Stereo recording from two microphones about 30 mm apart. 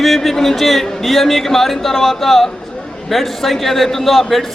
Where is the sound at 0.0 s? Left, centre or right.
Centre.